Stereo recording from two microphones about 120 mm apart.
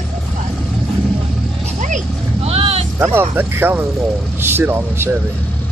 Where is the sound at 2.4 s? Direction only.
55° right (ahead or behind).